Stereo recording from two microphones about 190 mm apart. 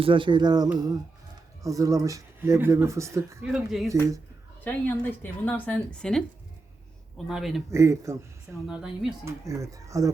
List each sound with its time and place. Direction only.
0.0 s music: 25° right (ahead or behind)
1.6 s speech: 15° right (ahead or behind)
3.5 s a woman's voice: centre (ahead or behind)
4.6 s a woman's voice: 10° left (ahead or behind)
7.3 s a woman's voice: centre (ahead or behind)
7.7 s speech: 15° right (ahead or behind)
8.6 s a woman's voice: centre (ahead or behind)
9.2 s speech: 15° right (ahead or behind)